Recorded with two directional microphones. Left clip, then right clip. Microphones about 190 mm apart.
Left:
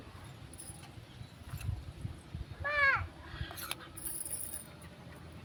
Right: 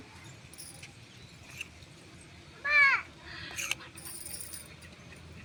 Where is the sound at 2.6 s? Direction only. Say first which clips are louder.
Right 6 dB; 60° left (ahead or behind).